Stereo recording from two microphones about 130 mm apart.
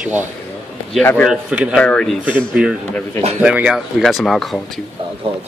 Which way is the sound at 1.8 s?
5° left (ahead or behind).